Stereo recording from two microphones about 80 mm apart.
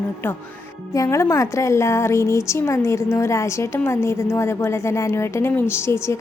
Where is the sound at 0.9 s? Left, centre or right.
Left.